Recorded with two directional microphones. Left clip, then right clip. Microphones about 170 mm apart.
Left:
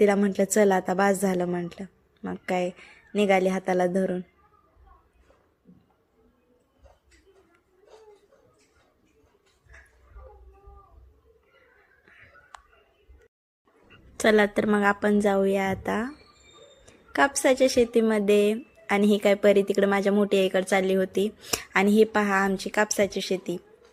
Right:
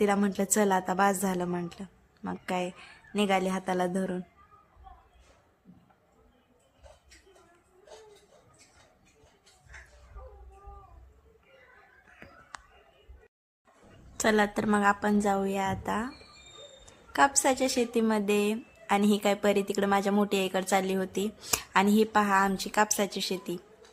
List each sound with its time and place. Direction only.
0.0 s a woman's voice: 15° left (ahead or behind)
14.2 s speech: 20° left (ahead or behind)
16.8 s a sound: 15° left (ahead or behind)
17.4 s a woman's voice: 20° left (ahead or behind)